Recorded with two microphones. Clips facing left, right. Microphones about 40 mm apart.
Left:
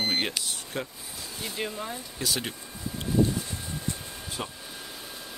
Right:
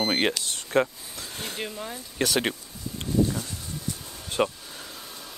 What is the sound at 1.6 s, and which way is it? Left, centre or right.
Speech, centre.